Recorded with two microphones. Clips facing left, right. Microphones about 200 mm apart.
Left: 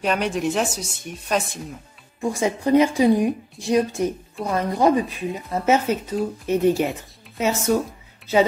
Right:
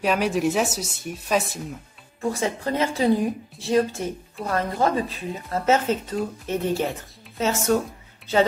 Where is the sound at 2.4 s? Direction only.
15° left (ahead or behind).